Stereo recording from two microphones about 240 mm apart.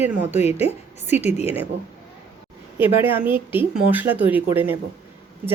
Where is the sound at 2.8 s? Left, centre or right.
Centre.